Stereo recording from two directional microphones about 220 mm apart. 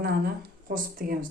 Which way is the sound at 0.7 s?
40° right (ahead or behind).